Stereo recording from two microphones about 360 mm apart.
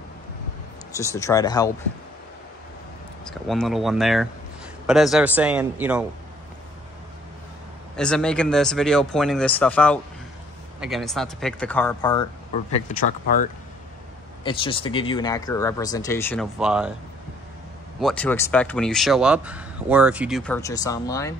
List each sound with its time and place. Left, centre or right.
0.9 s speech: centre
3.3 s speech: centre
7.9 s speech: centre
18.0 s speech: centre